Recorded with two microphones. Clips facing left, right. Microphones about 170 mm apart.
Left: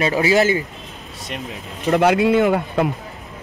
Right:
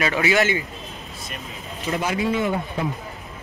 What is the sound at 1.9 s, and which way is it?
Speech, 70° left (ahead or behind).